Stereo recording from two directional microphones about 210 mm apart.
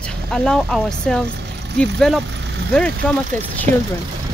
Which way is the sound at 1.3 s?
55° right (ahead or behind).